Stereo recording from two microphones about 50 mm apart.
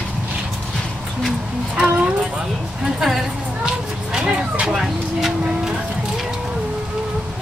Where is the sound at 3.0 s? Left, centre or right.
Centre.